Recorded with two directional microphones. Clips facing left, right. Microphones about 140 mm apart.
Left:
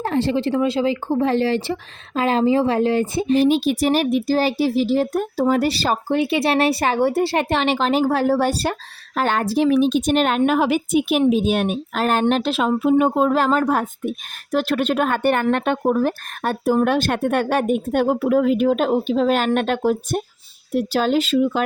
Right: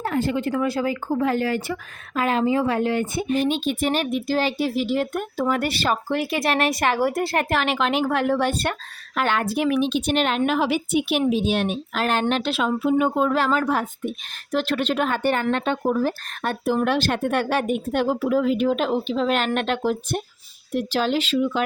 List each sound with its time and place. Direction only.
0.0 s speech: 35° left (ahead or behind)